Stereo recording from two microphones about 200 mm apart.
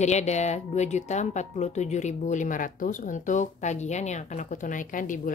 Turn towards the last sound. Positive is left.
turn(degrees=40)  # may be behind; listen again after turning